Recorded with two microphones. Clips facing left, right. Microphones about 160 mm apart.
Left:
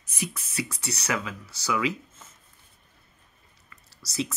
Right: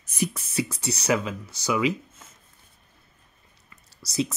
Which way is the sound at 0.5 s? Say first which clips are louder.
Right 5 dB; 25° right (ahead or behind).